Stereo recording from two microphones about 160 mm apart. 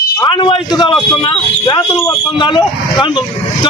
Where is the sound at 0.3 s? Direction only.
30° left (ahead or behind).